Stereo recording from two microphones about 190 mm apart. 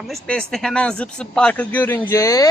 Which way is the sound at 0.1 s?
5° left (ahead or behind).